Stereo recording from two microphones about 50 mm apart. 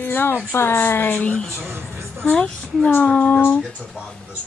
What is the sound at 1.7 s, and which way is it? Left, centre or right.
Speech, right.